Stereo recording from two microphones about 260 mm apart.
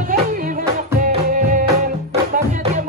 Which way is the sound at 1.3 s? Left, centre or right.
Right.